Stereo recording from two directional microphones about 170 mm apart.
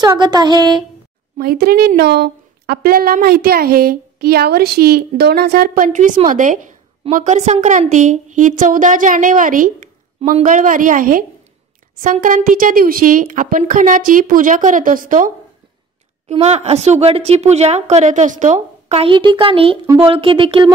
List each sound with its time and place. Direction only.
0.0 s a sound: 25° right (ahead or behind)
1.4 s a woman's voice: 65° right (ahead or behind)
16.3 s a woman's voice: 40° right (ahead or behind)